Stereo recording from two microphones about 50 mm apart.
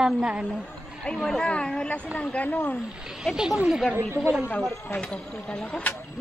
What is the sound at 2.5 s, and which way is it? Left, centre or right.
Speech, left.